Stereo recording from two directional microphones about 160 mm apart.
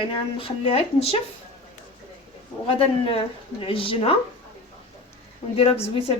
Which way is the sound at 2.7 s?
35° left (ahead or behind).